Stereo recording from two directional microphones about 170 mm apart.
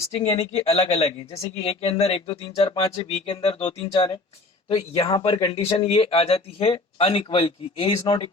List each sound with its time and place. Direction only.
0.3 s speech: 35° left (ahead or behind)